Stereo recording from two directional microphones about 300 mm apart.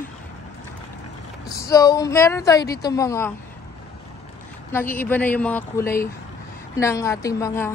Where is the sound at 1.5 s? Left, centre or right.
Centre.